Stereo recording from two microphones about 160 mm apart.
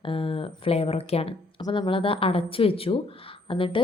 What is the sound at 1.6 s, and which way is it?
A woman's voice, 25° left (ahead or behind).